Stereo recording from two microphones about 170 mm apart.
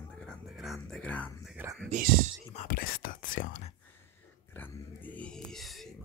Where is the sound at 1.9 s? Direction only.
50° right (ahead or behind).